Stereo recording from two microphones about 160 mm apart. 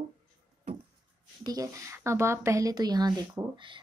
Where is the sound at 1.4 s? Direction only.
20° right (ahead or behind).